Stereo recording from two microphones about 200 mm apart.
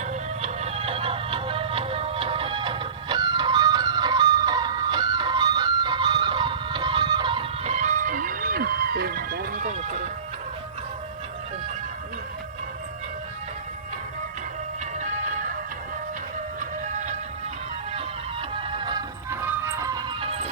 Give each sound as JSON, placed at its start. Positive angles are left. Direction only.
{"t": 0.0, "sound": "music", "side_deg": -35}
{"t": 14.9, "sound": "music", "side_deg": -35}
{"t": 16.6, "sound": "music", "side_deg": -35}
{"t": 18.5, "sound": "music", "side_deg": -25}